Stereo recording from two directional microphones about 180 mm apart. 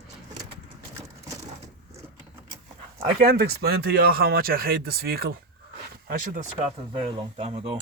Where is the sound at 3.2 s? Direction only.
60° right (ahead or behind).